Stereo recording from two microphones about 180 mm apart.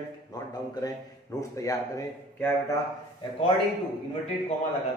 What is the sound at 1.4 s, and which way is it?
A man's voice, 20° left (ahead or behind).